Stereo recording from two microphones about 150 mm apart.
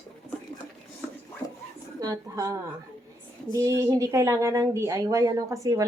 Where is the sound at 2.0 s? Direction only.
25° right (ahead or behind).